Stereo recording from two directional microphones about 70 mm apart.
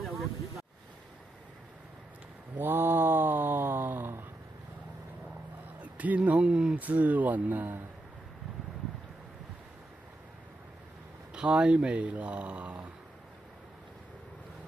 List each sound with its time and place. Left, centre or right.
0.0 s vehicle: centre
2.6 s a sound: right
5.8 s speech: right
6.8 s speech: right
11.3 s speech: centre